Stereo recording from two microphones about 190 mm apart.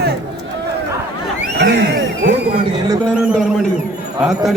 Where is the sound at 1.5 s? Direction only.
65° right (ahead or behind).